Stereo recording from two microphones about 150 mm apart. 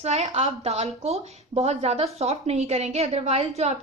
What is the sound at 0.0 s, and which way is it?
A woman's voice, 45° right (ahead or behind).